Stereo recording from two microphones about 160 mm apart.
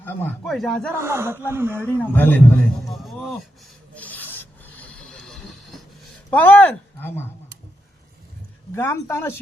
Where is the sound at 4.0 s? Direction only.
10° left (ahead or behind).